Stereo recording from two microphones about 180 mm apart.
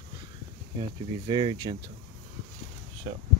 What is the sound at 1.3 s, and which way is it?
Speech, 25° right (ahead or behind).